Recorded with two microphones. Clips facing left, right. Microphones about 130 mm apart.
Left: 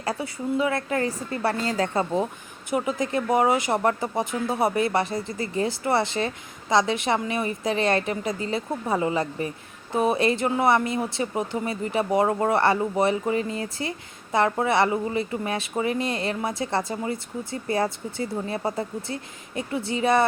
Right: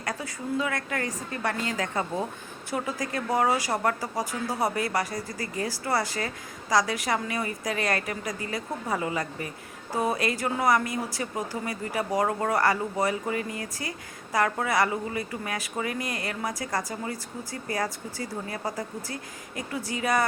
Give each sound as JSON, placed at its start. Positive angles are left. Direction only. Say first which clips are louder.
{"t": 0.0, "sound": "speech", "louder": "left 5 dB", "side_deg": 30}
{"t": 2.6, "sound": "speech", "louder": "left 5 dB", "side_deg": 20}